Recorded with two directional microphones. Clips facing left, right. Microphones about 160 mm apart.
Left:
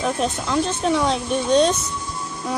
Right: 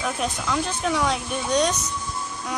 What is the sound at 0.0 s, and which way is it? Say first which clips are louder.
Speech: left 4 dB; 25° left (ahead or behind).